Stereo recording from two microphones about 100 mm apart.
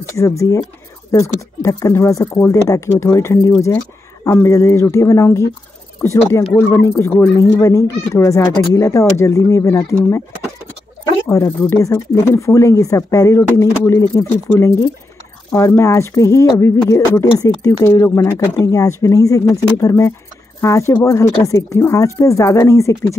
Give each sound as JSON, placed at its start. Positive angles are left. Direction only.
{"t": 0.1, "sound": "speech", "side_deg": 30}
{"t": 11.2, "sound": "speech", "side_deg": 30}